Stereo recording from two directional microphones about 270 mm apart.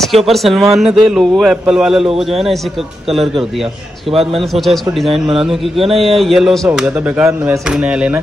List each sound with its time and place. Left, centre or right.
0.0 s speech: centre
2.0 s speech: right
3.1 s speech: centre